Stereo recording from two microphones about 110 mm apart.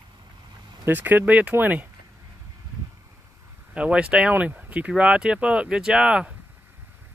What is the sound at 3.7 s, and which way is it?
Speech, 10° right (ahead or behind).